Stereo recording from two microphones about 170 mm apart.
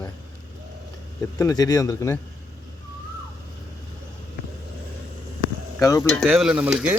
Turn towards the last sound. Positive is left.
turn(degrees=-5)  # may be behind; listen again after turning